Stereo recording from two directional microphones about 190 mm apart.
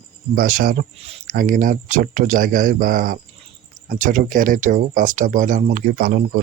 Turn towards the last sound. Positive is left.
turn(degrees=-50)  # may be behind; listen again after turning